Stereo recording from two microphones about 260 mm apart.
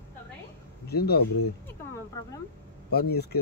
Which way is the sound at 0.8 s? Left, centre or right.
Left.